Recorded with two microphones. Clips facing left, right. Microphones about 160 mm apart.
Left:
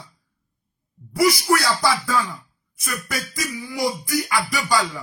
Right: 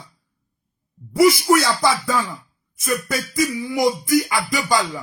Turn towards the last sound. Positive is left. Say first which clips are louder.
# right 2 dB
turn(degrees=-20)  # may be behind; listen again after turning